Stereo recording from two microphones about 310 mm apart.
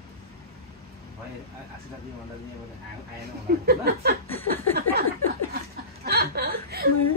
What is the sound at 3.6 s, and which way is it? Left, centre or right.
Speech, right.